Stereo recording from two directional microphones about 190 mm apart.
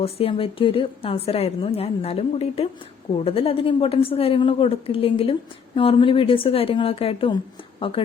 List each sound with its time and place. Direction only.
0.0 s a woman's voice: 30° left (ahead or behind)